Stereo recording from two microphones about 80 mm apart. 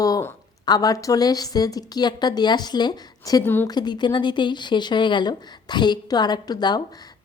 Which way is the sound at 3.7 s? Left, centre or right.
Left.